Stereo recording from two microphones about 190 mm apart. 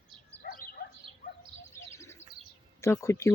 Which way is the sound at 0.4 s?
50° left (ahead or behind).